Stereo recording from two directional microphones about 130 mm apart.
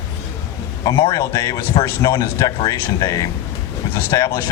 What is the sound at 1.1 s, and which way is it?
Speech, 25° left (ahead or behind).